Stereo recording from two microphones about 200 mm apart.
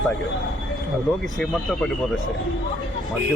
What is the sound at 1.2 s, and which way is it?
Speech, centre (ahead or behind).